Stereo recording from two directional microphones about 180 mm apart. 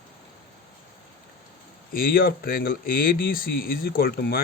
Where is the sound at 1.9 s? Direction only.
55° left (ahead or behind).